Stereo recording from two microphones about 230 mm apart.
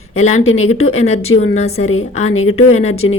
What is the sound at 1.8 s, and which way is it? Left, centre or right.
Speech, left.